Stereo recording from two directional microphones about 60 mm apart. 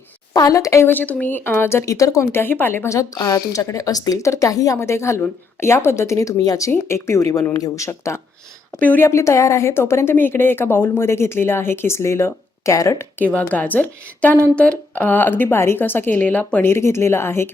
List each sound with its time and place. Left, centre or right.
0.3 s speech: left
0.9 s a woman's voice: left
1.5 s a woman's voice: left
1.8 s speech: left
2.3 s a woman's voice: left
2.9 s speech: left
4.3 s speech: left
4.8 s a woman's voice: left
6.1 s speech: left
6.7 s a woman's voice: left
7.9 s a woman's voice: left
12.7 s speech: left
13.1 s a woman's voice: left
16.6 s a woman's voice: left